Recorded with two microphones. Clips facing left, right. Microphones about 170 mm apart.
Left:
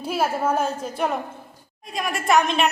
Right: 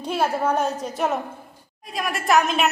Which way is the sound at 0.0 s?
5° left (ahead or behind).